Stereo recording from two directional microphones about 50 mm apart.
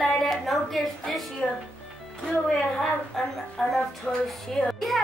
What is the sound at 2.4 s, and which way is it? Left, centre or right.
A woman's voice, centre.